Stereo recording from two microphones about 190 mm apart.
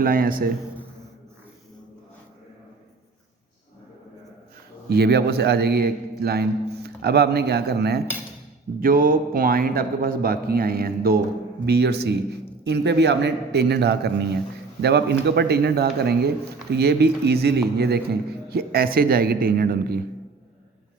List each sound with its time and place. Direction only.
0.0 s a man's voice: 50° right (ahead or behind)
4.9 s a man's voice: 55° right (ahead or behind)